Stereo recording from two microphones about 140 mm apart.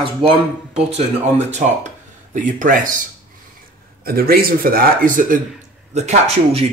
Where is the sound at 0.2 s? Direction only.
35° right (ahead or behind).